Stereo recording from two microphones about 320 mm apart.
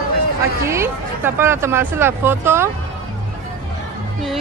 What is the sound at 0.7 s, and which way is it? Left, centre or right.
Speech, centre.